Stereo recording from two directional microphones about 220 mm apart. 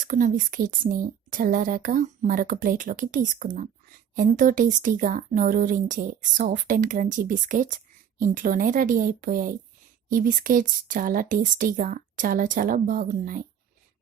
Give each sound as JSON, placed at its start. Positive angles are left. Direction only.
{"t": 0.0, "sound": "a woman's voice", "side_deg": -35}